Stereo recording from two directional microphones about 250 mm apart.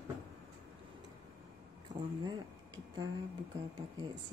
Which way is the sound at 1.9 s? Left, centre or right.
Right.